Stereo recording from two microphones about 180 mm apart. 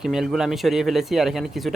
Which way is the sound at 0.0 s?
5° right (ahead or behind).